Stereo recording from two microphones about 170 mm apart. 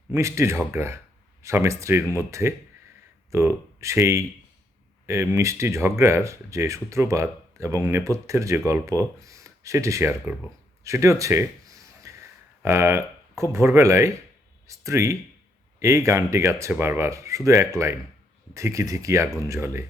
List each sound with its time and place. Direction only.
0.1 s speech: 15° right (ahead or behind)
10.8 s a sound: 15° right (ahead or behind)
12.6 s speech: 15° right (ahead or behind)